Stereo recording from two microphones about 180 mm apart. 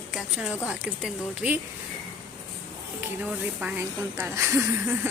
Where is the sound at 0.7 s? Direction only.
5° right (ahead or behind).